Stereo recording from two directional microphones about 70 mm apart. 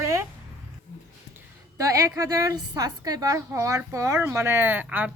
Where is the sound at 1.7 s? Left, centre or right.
Right.